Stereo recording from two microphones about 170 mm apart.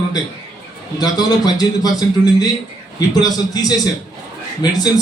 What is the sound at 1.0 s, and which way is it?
A man's voice, 25° left (ahead or behind).